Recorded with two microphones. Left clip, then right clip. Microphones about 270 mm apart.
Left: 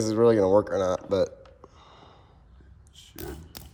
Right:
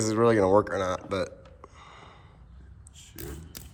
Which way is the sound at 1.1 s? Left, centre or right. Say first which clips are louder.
Left 6 dB; centre.